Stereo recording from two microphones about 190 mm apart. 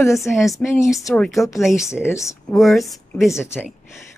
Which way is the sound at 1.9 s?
15° left (ahead or behind).